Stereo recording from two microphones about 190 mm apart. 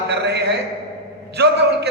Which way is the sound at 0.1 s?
60° right (ahead or behind).